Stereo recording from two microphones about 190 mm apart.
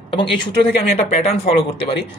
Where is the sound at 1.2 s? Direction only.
30° left (ahead or behind).